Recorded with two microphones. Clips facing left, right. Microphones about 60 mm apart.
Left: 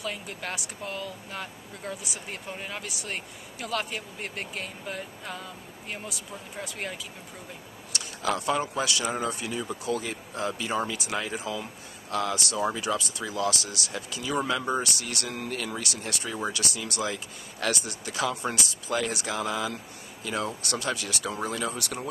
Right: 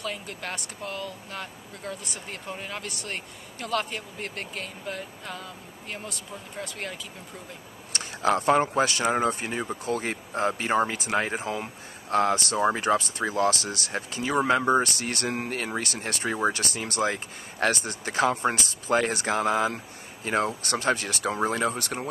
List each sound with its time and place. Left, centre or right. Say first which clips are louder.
0.0 s speech: right 1 dB; centre
7.9 s a man's voice: right 5 dB; right